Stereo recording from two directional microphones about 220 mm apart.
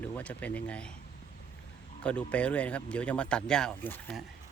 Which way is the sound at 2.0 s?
5° left (ahead or behind).